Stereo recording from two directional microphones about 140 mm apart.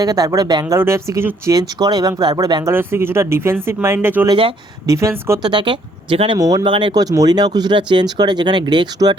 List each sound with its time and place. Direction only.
0.0 s speech: 25° right (ahead or behind)
2.7 s speech: 15° right (ahead or behind)
4.3 s speech: 40° right (ahead or behind)
4.9 s speech: 20° right (ahead or behind)
5.5 s speech: 35° right (ahead or behind)
6.4 s speech: 25° right (ahead or behind)